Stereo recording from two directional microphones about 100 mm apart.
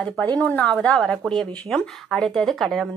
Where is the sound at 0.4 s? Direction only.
15° left (ahead or behind).